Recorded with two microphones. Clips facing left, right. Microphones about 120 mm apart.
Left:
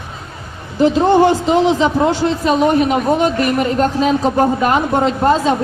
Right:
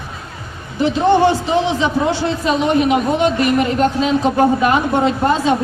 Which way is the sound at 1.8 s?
40° left (ahead or behind).